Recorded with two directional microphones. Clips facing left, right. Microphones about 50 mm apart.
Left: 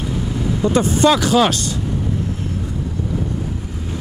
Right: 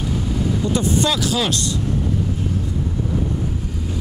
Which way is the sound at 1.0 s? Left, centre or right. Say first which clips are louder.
Left 7 dB; left.